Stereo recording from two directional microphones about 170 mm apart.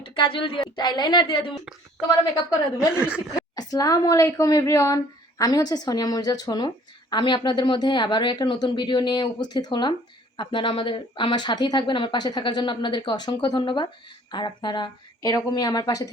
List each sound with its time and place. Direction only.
0.0 s a woman's voice: 30° left (ahead or behind)
2.7 s speech: 5° right (ahead or behind)
3.5 s speech: 20° left (ahead or behind)